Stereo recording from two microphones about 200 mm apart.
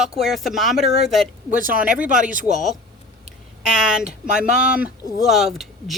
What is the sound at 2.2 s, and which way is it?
Speech, 40° right (ahead or behind).